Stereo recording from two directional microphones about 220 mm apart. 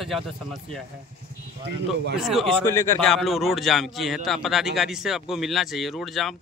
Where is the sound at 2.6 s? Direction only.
10° left (ahead or behind).